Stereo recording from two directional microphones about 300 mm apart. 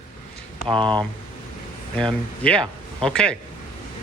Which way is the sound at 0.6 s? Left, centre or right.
Centre.